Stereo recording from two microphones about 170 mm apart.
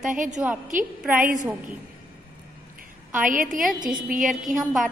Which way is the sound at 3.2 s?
50° right (ahead or behind).